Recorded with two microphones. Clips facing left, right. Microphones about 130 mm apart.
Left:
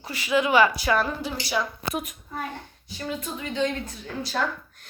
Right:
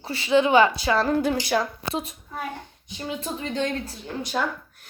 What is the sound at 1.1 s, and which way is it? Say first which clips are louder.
Speech: right 9 dB; 55° right (ahead or behind).